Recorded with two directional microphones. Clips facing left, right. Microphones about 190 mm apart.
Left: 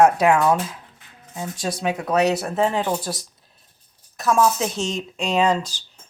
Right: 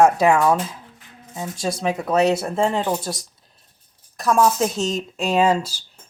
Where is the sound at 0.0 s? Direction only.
5° left (ahead or behind).